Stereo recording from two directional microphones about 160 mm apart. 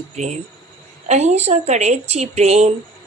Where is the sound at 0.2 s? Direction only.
50° right (ahead or behind).